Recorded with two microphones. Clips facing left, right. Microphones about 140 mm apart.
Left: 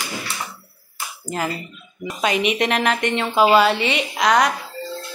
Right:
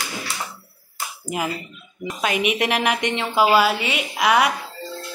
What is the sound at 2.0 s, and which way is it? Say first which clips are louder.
Speech: left 2 dB; centre (ahead or behind).